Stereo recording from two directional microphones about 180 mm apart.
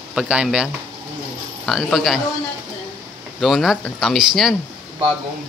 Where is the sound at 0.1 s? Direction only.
5° right (ahead or behind).